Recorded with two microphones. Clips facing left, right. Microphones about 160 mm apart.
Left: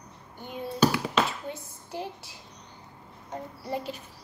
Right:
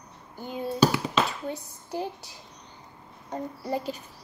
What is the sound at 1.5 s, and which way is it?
Speech, centre (ahead or behind).